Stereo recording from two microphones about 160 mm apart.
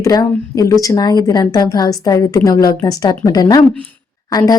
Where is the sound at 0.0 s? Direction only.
20° left (ahead or behind).